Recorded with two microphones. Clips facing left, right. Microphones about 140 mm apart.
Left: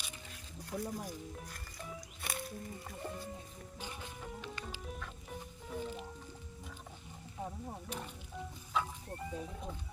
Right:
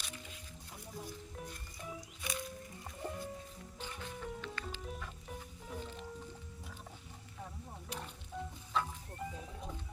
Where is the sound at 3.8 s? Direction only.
10° left (ahead or behind).